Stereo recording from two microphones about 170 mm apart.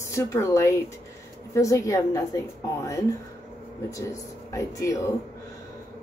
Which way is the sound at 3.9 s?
20° left (ahead or behind).